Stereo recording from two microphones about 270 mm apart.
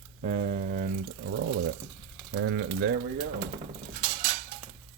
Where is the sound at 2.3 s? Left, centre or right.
Right.